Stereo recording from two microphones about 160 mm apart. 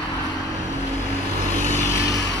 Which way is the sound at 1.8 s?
20° left (ahead or behind).